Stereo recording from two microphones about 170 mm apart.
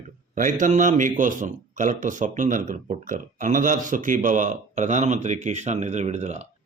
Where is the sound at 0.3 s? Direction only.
50° right (ahead or behind).